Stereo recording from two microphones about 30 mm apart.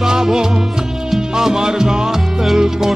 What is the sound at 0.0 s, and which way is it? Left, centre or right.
Music, centre.